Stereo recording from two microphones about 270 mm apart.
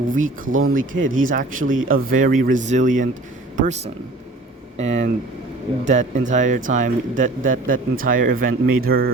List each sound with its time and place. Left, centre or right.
0.1 s speech: right
1.6 s speech: right
2.0 s speech: right
4.8 s speech: right